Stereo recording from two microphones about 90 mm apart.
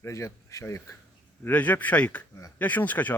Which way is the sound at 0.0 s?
35° left (ahead or behind).